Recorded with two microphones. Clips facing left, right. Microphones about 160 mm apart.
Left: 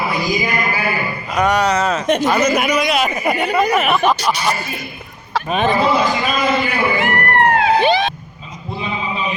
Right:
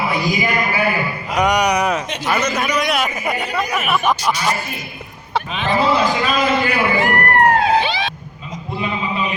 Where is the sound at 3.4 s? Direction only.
60° left (ahead or behind).